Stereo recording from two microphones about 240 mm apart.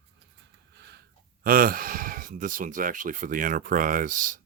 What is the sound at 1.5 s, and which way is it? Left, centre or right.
Speech, right.